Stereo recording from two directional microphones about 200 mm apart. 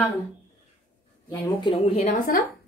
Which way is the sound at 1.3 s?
20° left (ahead or behind).